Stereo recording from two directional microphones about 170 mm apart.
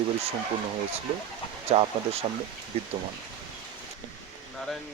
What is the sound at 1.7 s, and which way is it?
Speech, 35° right (ahead or behind).